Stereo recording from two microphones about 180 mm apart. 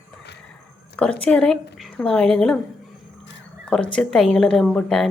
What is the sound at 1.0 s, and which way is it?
Speech, 5° left (ahead or behind).